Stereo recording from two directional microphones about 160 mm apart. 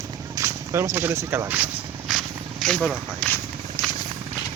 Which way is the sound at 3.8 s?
20° left (ahead or behind).